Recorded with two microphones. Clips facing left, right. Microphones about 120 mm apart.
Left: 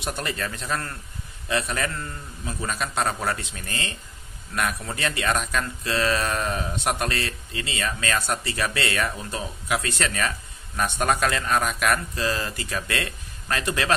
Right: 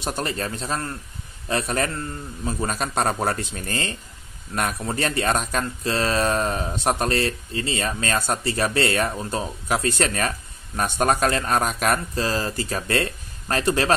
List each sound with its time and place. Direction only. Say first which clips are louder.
0.0 s speech: right 3 dB; 35° right (ahead or behind)
1.5 s speech: right 2 dB; 40° right (ahead or behind)